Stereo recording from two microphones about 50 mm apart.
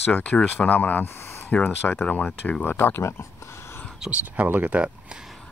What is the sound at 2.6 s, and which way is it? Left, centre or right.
Speech, left.